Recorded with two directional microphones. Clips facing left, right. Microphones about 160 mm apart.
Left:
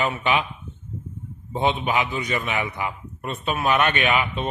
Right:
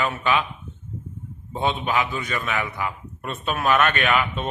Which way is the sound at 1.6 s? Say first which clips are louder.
Left 1 dB; 15° left (ahead or behind).